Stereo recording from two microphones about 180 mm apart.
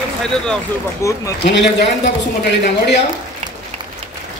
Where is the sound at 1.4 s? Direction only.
70° left (ahead or behind).